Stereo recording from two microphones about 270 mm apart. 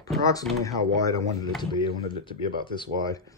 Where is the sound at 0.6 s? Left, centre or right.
Centre.